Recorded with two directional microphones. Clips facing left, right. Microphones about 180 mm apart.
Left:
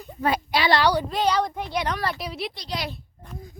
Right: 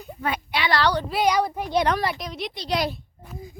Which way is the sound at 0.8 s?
10° left (ahead or behind).